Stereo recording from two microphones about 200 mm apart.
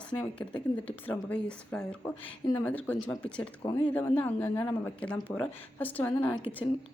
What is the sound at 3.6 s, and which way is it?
Speech, 20° left (ahead or behind).